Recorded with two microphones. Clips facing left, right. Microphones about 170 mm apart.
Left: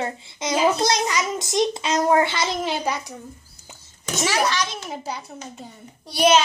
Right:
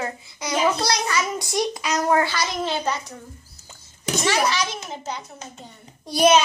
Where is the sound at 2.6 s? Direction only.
10° left (ahead or behind).